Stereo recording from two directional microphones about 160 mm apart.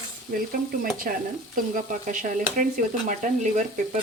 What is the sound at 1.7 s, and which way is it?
Speech, 55° right (ahead or behind).